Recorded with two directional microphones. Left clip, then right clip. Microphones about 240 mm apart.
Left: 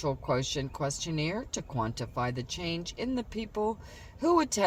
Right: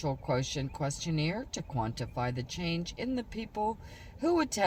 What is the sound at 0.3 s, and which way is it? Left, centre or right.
Speech, left.